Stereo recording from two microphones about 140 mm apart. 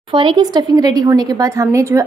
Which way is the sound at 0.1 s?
35° right (ahead or behind).